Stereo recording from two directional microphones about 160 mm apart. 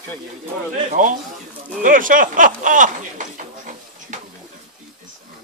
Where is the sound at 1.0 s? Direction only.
50° right (ahead or behind).